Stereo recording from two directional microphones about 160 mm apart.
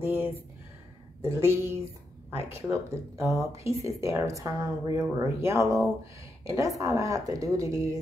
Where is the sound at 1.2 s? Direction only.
15° right (ahead or behind).